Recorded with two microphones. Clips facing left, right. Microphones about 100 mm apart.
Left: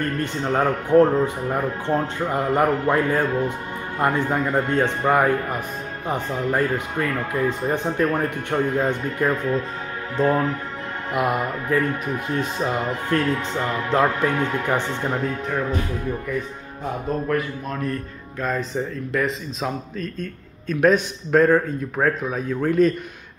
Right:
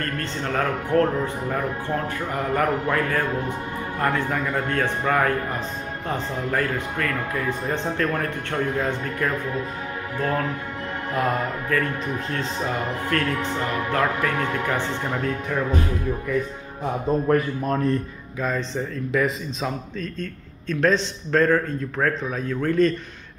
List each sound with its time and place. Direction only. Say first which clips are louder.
0.0 s a man's voice: left 3 dB; 15° left (ahead or behind)
17.3 s a man's voice: right 4 dB; 35° right (ahead or behind)
18.4 s a man's voice: left 1 dB; 5° left (ahead or behind)